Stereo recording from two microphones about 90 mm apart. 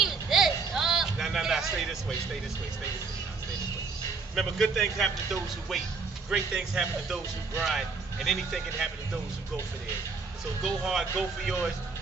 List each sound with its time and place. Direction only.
0.0 s a sound: 5° right (ahead or behind)
4.4 s speech: centre (ahead or behind)
10.6 s speech: 5° right (ahead or behind)